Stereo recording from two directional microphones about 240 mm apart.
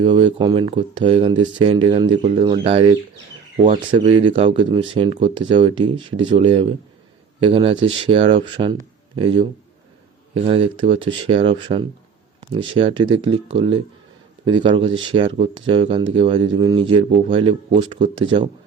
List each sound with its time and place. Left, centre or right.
0.0 s speech: right